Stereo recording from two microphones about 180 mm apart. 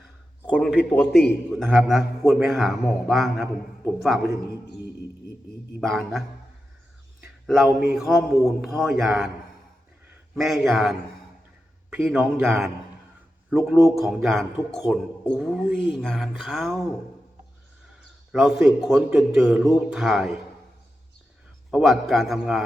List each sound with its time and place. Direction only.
0.5 s speech: centre (ahead or behind)
5.8 s speech: centre (ahead or behind)
7.4 s speech: centre (ahead or behind)
10.3 s speech: centre (ahead or behind)
18.3 s speech: centre (ahead or behind)
21.7 s speech: centre (ahead or behind)